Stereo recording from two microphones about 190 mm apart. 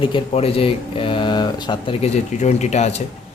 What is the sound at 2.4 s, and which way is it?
Speech, 35° left (ahead or behind).